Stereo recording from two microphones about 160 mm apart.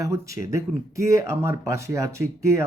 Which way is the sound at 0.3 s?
55° left (ahead or behind).